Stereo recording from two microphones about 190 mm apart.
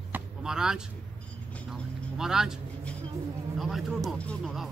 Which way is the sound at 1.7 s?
5° right (ahead or behind).